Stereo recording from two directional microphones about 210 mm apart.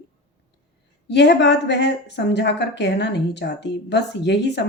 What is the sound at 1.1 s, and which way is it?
Speech, 55° left (ahead or behind).